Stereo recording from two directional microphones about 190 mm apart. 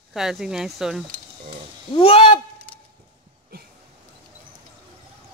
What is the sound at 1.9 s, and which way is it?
Speech, 30° left (ahead or behind).